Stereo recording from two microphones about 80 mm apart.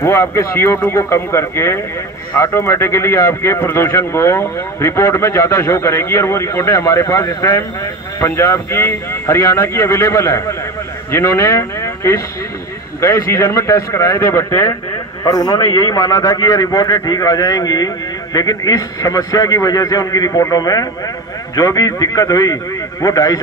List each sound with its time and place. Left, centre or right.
0.0 s a man's voice: left
15.2 s a man's voice: left
15.6 s a man's voice: left